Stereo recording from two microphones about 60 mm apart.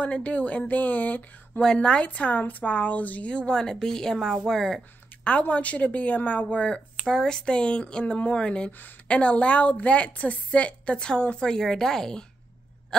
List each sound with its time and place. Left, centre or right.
0.0 s a woman's voice: left
1.6 s a woman's voice: centre
5.2 s a woman's voice: left
7.1 s a woman's voice: centre